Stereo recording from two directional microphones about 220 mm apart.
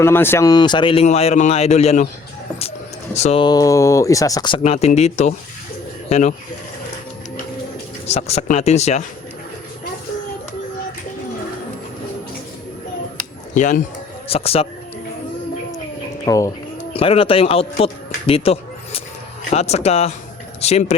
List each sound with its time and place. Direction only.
0.0 s speech: 10° left (ahead or behind); by 2.0 s 30° left (ahead or behind)
3.2 s speech: 25° left (ahead or behind)
8.0 s speech: 30° left (ahead or behind)
13.5 s speech: 35° left (ahead or behind)
16.2 s speech: 15° left (ahead or behind)